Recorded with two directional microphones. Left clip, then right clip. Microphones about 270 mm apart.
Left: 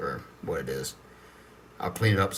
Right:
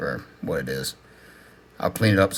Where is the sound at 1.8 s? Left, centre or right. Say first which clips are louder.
Right 6 dB; right.